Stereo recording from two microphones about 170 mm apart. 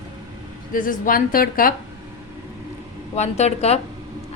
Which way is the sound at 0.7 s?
55° left (ahead or behind).